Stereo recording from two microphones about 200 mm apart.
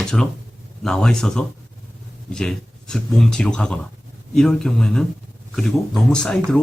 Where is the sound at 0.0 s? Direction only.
5° left (ahead or behind).